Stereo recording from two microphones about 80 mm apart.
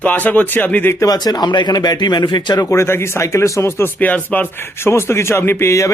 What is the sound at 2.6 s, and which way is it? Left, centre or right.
Speech, left.